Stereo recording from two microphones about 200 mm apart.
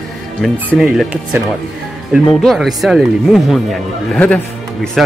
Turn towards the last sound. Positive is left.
turn(degrees=0)  # may be behind; listen again after turning